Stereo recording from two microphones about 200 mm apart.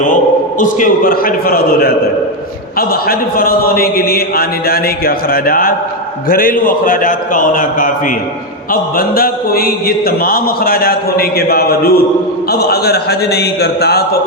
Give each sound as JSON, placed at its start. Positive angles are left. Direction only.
{"t": 0.6, "sound": "speech", "side_deg": 40}